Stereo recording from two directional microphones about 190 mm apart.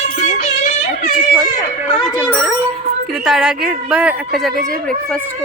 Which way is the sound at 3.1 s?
Centre (ahead or behind).